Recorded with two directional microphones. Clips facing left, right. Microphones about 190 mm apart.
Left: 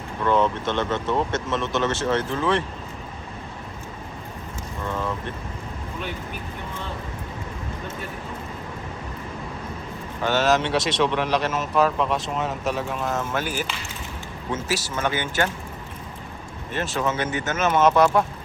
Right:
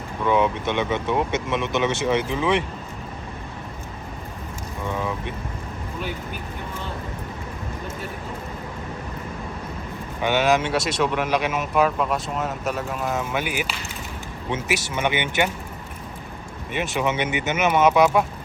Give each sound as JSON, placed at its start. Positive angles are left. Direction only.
{"t": 0.2, "sound": "speech", "side_deg": -10}
{"t": 4.8, "sound": "mechanisms", "side_deg": -10}
{"t": 10.2, "sound": "speech", "side_deg": -15}
{"t": 14.5, "sound": "speech", "side_deg": -20}
{"t": 16.7, "sound": "speech", "side_deg": -15}